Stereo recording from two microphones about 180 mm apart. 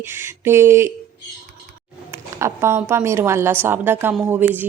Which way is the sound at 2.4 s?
15° right (ahead or behind).